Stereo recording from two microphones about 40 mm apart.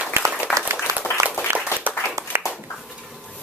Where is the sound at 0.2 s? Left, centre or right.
Right.